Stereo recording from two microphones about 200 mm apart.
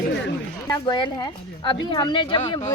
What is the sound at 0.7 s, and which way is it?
A woman's voice, 20° left (ahead or behind).